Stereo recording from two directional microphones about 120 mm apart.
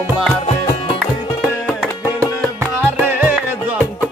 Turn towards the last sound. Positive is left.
turn(degrees=-15)  # may be behind; listen again after turning